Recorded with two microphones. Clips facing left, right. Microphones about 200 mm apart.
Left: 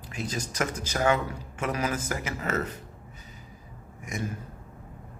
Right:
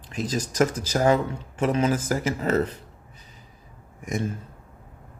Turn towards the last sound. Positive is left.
turn(degrees=-30)  # may be behind; listen again after turning